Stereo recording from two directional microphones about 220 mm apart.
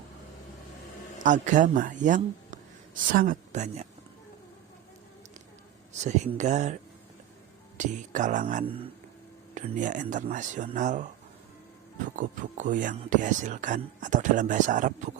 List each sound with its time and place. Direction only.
1.2 s speech: 35° right (ahead or behind)
6.0 s speech: 30° right (ahead or behind)
7.8 s speech: 35° right (ahead or behind)
12.1 s speech: 35° right (ahead or behind)